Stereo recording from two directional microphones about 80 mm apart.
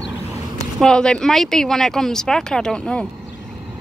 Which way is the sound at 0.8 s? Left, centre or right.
Centre.